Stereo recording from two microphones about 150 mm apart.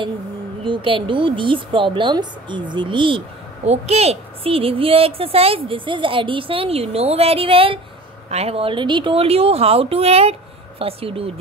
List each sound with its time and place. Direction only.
0.7 s a woman's voice: 35° right (ahead or behind)